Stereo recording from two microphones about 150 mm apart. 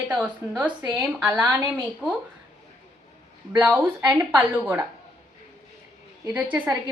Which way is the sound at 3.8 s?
15° right (ahead or behind).